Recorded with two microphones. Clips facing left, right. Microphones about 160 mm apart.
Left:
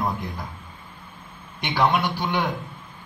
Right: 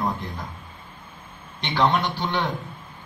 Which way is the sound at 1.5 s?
10° left (ahead or behind).